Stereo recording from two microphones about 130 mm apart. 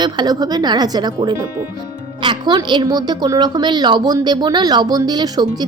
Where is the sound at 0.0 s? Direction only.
30° right (ahead or behind).